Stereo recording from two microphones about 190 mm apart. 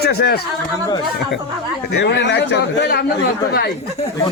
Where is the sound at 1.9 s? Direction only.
60° left (ahead or behind).